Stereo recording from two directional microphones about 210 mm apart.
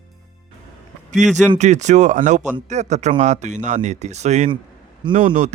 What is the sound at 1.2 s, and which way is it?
Speech, 35° right (ahead or behind).